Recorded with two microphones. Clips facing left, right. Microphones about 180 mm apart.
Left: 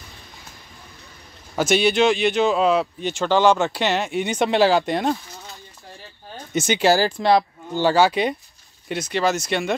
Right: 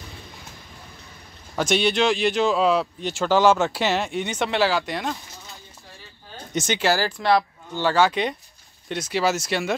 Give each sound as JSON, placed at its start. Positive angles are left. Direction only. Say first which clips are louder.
{"t": 1.6, "sound": "speech", "louder": "left 3 dB", "side_deg": 5}
{"t": 4.6, "sound": "speech", "louder": "left 5 dB", "side_deg": 45}
{"t": 6.5, "sound": "speech", "louder": "left 4 dB", "side_deg": 10}
{"t": 7.8, "sound": "speech", "louder": "left 3 dB", "side_deg": 10}